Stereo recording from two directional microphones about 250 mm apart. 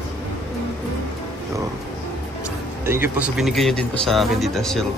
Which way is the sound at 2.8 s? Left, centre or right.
Centre.